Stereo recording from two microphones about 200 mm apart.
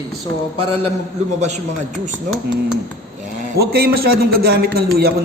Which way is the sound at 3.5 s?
50° right (ahead or behind).